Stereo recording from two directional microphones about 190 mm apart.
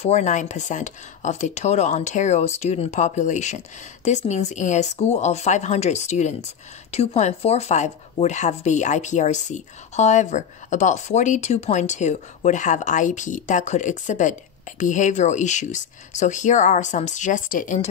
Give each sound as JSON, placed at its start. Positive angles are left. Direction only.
{"t": 0.0, "sound": "speech", "side_deg": 40}